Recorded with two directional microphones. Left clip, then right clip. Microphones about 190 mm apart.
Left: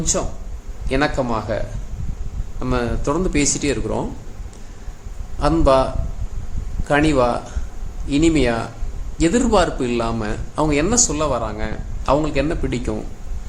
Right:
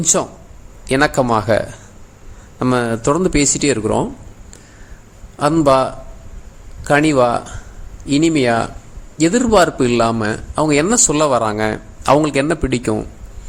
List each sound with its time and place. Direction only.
0.0 s a man's voice: 50° right (ahead or behind)
5.4 s a man's voice: 35° right (ahead or behind)